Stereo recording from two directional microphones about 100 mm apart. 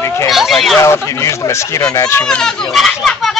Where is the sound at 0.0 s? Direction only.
30° left (ahead or behind).